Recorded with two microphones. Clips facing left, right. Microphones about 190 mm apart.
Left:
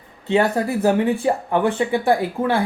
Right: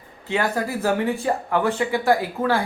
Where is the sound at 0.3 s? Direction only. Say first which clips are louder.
Left 5 dB; 25° left (ahead or behind).